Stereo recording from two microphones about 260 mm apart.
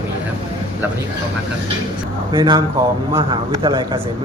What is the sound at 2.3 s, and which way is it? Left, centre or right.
Speech, centre.